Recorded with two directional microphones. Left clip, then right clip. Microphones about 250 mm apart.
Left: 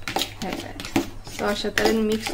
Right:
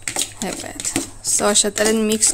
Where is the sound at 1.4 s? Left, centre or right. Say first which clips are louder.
Right 4 dB; right.